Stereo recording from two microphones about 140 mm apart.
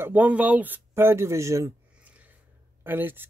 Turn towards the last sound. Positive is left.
turn(degrees=-15)  # may be behind; listen again after turning